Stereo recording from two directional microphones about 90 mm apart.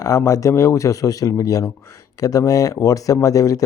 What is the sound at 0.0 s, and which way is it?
Speech, 35° left (ahead or behind).